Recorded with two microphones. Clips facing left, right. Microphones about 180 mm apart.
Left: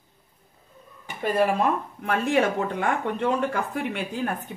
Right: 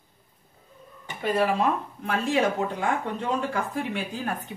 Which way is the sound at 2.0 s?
55° left (ahead or behind).